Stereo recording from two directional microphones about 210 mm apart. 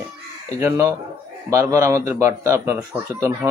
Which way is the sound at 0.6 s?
15° right (ahead or behind).